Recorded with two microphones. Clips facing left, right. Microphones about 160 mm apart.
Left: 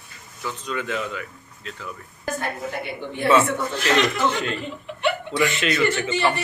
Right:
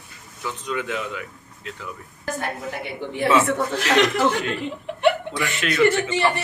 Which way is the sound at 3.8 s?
70° right (ahead or behind).